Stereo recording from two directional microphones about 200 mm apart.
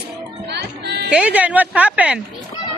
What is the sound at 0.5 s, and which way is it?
Music, 55° right (ahead or behind).